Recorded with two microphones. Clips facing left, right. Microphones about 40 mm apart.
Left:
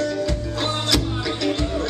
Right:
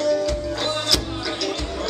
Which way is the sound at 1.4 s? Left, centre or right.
Left.